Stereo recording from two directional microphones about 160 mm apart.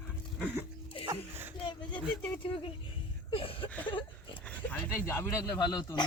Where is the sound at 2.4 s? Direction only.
35° left (ahead or behind).